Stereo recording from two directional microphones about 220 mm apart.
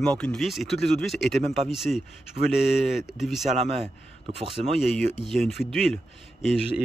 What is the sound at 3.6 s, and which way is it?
A man's voice, 30° right (ahead or behind).